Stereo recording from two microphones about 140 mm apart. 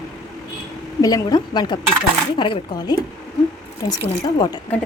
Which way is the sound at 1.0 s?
25° left (ahead or behind).